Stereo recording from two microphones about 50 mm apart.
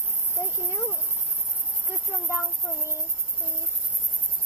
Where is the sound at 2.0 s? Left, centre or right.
Left.